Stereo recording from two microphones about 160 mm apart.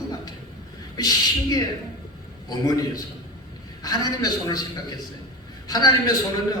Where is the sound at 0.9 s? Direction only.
25° left (ahead or behind).